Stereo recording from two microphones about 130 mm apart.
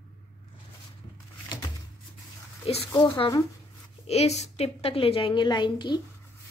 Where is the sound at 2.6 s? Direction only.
45° left (ahead or behind).